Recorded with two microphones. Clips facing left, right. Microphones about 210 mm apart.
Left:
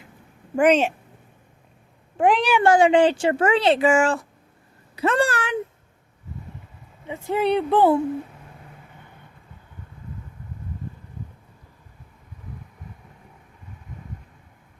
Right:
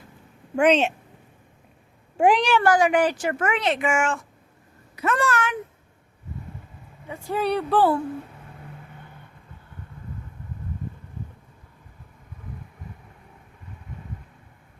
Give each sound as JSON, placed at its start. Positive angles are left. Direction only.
{"t": 0.5, "sound": "speech", "side_deg": 10}
{"t": 2.1, "sound": "speech", "side_deg": -5}
{"t": 2.6, "sound": "speech", "side_deg": 25}
{"t": 4.9, "sound": "a sound", "side_deg": 30}
{"t": 7.1, "sound": "speech", "side_deg": 20}